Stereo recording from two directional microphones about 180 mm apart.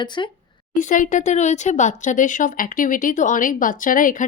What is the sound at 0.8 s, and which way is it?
Speech, 45° left (ahead or behind).